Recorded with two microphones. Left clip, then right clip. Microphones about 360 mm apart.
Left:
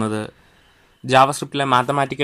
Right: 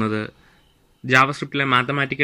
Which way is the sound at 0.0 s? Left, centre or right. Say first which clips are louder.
Even; centre.